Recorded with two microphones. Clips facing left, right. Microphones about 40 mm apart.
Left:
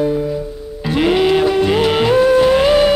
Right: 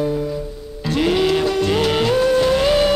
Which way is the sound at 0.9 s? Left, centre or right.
Centre.